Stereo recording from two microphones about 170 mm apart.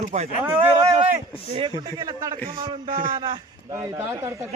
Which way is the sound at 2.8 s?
55° right (ahead or behind).